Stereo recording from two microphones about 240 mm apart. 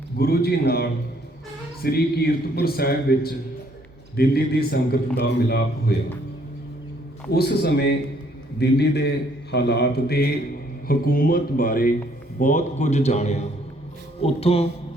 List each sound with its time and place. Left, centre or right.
0.2 s a man's voice: left
7.3 s a man's voice: left